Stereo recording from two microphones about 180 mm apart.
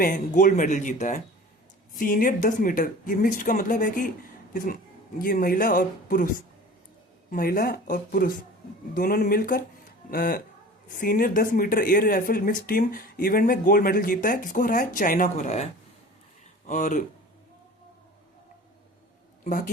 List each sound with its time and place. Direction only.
0.0 s speech: 50° left (ahead or behind)
7.3 s speech: 50° left (ahead or behind)
19.5 s speech: 45° left (ahead or behind)